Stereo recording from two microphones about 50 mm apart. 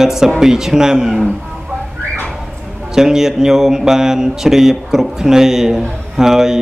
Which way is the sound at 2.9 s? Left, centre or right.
Centre.